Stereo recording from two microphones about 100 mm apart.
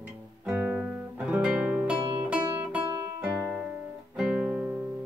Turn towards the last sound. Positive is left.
turn(degrees=-15)  # may be behind; listen again after turning